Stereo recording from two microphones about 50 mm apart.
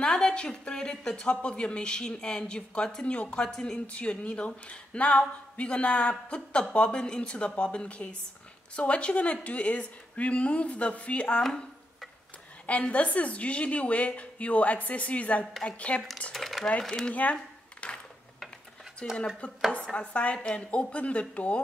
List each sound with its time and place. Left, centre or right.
0.0 s speech: centre
3.8 s speech: left
12.6 s speech: left
16.3 s speech: centre
17.1 s a sound: left
19.7 s speech: centre